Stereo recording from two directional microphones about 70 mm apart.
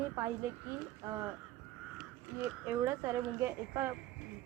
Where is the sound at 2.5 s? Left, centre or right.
Right.